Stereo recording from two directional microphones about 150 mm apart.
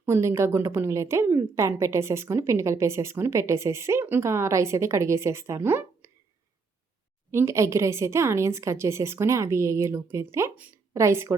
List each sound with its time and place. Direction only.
0.0 s a woman's voice: 15° right (ahead or behind)
7.3 s a woman's voice: 20° right (ahead or behind)